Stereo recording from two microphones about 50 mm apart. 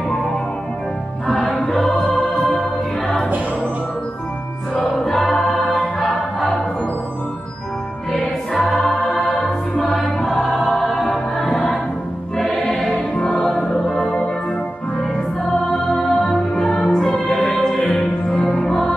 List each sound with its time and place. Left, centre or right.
1.5 s music: centre
4.9 s choir: centre
8.6 s music: centre
9.8 s choir: centre
11.3 s music: centre
12.7 s music: centre
13.5 s music: centre
15.7 s music: centre
17.6 s music: centre